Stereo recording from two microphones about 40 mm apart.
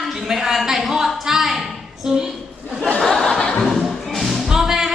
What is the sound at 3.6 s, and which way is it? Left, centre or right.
Music, centre.